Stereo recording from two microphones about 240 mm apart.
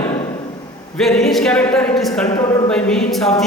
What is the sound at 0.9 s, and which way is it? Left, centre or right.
Speech, centre.